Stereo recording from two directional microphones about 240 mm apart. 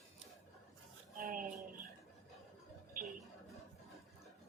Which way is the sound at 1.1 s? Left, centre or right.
Right.